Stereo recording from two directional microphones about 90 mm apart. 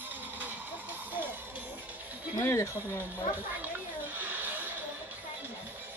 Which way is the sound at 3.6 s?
20° right (ahead or behind).